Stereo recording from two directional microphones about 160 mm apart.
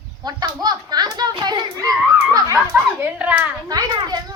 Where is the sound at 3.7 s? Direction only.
25° right (ahead or behind).